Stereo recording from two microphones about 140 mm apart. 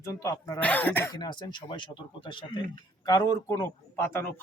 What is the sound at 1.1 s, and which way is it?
Speech, 30° left (ahead or behind).